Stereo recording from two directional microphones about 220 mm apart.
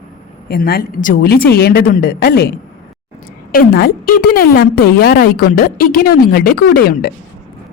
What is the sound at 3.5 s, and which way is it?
A woman's voice, 45° left (ahead or behind).